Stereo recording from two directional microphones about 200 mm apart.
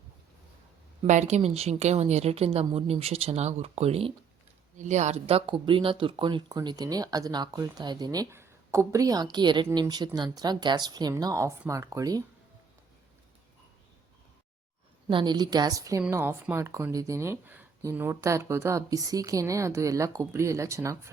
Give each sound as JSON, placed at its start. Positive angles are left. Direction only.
{"t": 1.0, "sound": "speech", "side_deg": -35}
{"t": 15.0, "sound": "a woman's voice", "side_deg": -20}